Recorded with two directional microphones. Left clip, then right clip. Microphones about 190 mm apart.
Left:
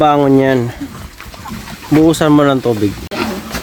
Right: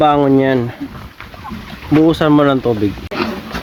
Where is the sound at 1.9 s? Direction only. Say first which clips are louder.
Left 1 dB; centre (ahead or behind).